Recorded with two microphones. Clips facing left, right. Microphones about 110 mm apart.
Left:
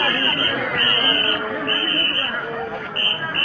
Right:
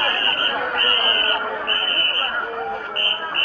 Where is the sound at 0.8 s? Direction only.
40° right (ahead or behind).